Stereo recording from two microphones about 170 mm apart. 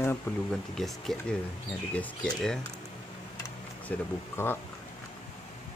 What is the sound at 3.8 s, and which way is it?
Speech, 15° left (ahead or behind).